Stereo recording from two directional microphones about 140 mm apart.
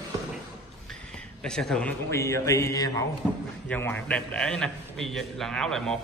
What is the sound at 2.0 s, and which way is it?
Speech, 20° left (ahead or behind).